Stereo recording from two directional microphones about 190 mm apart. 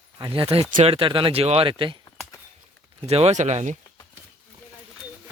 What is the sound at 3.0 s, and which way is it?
Speech, 35° right (ahead or behind).